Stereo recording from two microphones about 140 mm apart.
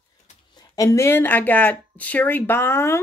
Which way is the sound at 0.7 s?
20° left (ahead or behind).